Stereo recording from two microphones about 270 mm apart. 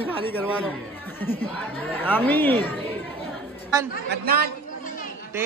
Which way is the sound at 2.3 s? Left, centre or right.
Centre.